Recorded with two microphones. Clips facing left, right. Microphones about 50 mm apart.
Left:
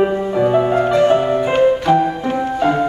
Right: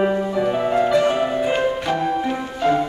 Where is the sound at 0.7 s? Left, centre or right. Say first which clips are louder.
Left 2 dB; left.